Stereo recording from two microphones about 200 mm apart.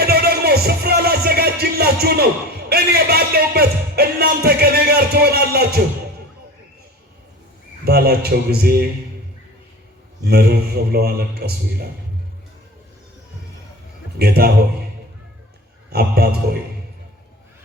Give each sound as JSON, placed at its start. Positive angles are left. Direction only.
{"t": 0.0, "sound": "music", "side_deg": -50}
{"t": 2.6, "sound": "speech", "side_deg": -50}
{"t": 7.9, "sound": "speech", "side_deg": -50}
{"t": 10.2, "sound": "speech", "side_deg": -50}
{"t": 14.2, "sound": "speech", "side_deg": -50}
{"t": 15.9, "sound": "speech", "side_deg": -50}